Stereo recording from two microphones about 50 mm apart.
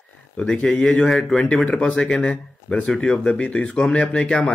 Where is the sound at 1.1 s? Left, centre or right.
Centre.